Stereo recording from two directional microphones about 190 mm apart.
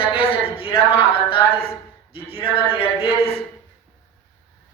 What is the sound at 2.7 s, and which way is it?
Speech, 30° left (ahead or behind).